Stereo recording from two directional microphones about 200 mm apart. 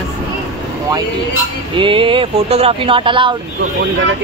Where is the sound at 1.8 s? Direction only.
25° right (ahead or behind).